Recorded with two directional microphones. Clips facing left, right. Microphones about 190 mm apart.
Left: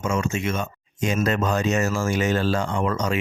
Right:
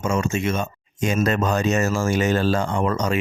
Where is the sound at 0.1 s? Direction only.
35° right (ahead or behind).